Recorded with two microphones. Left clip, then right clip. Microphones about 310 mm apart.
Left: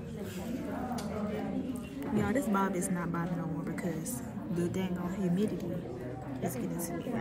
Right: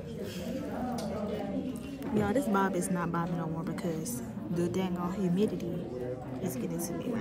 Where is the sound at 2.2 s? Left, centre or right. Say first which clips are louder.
Right 2 dB; centre.